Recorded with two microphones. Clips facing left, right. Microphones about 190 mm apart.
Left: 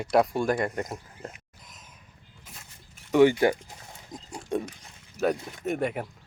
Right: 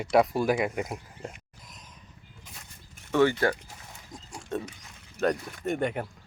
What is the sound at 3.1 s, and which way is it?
Speech, 15° left (ahead or behind).